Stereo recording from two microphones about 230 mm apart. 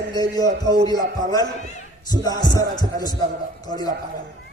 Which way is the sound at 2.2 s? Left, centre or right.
Centre.